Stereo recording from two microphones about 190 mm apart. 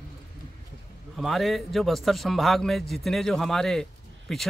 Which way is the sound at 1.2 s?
Centre (ahead or behind).